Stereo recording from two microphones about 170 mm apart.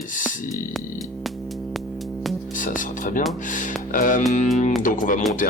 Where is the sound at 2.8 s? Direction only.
50° left (ahead or behind).